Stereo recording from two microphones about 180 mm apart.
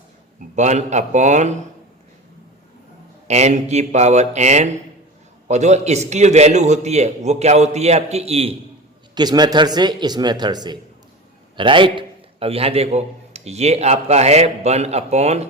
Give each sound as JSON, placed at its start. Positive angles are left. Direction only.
{"t": 0.5, "sound": "a man's voice", "side_deg": -40}
{"t": 3.2, "sound": "a man's voice", "side_deg": -40}
{"t": 9.1, "sound": "a man's voice", "side_deg": -25}